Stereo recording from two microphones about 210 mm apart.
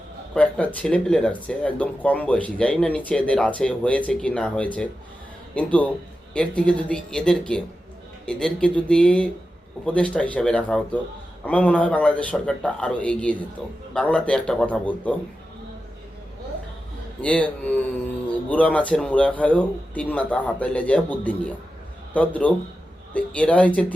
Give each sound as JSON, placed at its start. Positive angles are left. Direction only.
{"t": 0.3, "sound": "speech", "side_deg": 5}
{"t": 17.2, "sound": "speech", "side_deg": 5}